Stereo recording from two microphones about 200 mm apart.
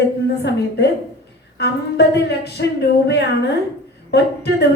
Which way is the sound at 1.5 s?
55° left (ahead or behind).